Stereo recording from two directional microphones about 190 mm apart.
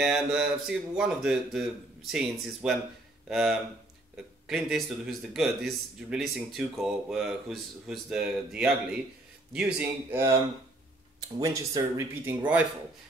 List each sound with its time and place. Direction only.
0.0 s speech: centre (ahead or behind)